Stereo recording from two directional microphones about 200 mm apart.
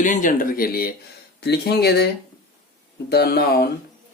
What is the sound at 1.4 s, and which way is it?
Speech, 55° left (ahead or behind).